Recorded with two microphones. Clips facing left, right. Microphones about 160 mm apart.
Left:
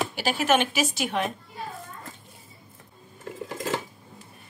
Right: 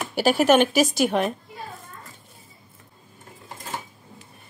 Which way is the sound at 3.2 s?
90° left.